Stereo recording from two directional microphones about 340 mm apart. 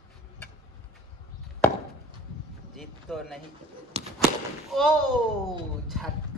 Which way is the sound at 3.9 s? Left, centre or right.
Centre.